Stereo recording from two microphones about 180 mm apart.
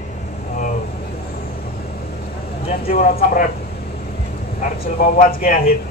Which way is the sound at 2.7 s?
55° left (ahead or behind).